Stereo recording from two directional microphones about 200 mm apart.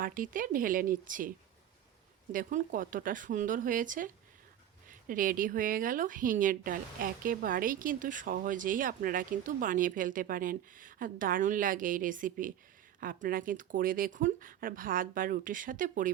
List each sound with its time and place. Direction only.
0.0 s speech: 45° right (ahead or behind)
2.3 s speech: 40° right (ahead or behind)